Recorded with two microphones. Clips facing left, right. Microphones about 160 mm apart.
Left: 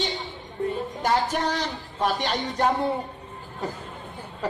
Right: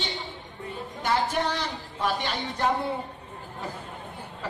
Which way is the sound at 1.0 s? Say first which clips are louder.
Left 2 dB; 40° left (ahead or behind).